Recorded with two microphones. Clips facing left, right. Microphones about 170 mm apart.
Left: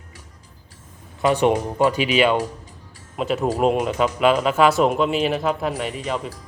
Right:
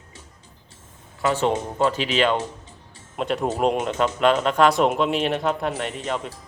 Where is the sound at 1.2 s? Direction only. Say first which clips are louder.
Left 4 dB; 15° left (ahead or behind).